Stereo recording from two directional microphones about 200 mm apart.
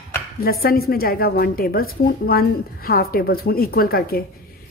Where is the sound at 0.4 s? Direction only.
50° left (ahead or behind).